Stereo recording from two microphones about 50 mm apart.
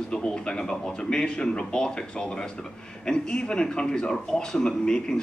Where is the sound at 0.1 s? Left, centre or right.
Centre.